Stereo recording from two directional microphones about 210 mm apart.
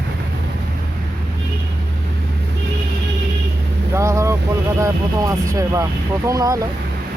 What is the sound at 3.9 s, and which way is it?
Speech, 15° right (ahead or behind).